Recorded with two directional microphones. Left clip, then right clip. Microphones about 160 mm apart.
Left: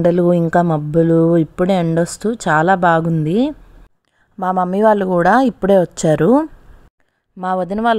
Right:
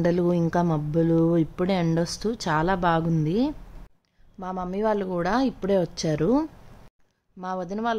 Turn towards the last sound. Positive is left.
turn(degrees=50)  # may be behind; listen again after turning